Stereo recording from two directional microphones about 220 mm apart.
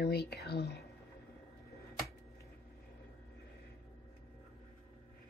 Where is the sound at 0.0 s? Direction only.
45° left (ahead or behind).